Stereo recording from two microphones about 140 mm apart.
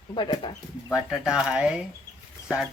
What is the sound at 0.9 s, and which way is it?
Speech, 5° right (ahead or behind).